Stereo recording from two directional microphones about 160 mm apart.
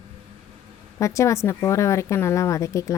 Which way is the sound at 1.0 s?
20° left (ahead or behind).